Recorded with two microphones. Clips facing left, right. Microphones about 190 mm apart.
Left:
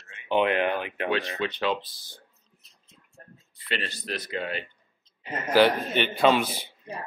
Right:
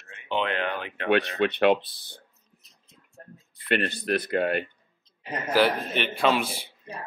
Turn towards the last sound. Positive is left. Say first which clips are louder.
# left 2 dB
turn(degrees=0)  # may be behind; listen again after turning